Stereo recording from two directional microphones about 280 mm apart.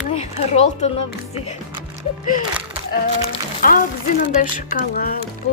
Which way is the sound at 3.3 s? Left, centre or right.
Left.